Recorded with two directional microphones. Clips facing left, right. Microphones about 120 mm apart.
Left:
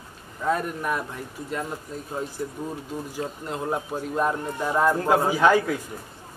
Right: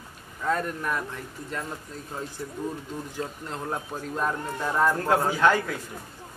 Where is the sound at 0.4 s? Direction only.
10° left (ahead or behind).